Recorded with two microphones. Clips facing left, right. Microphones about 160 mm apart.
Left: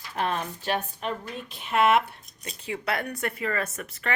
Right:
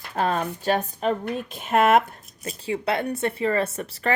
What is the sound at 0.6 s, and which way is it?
A woman's voice, 40° right (ahead or behind).